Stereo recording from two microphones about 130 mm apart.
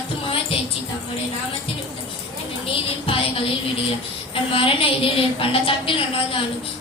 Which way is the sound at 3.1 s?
45° left (ahead or behind).